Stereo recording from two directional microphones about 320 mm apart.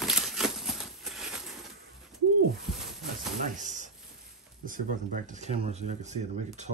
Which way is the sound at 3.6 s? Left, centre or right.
Right.